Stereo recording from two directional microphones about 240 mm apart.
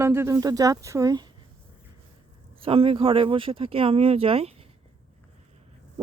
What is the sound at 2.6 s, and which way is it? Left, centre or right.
Speech, right.